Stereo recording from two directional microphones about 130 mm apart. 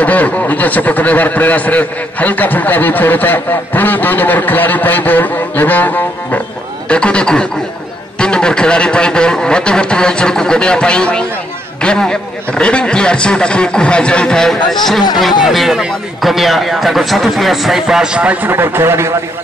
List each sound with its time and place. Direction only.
0.0 s a man's voice: 10° left (ahead or behind); by 19.1 s 20° right (ahead or behind)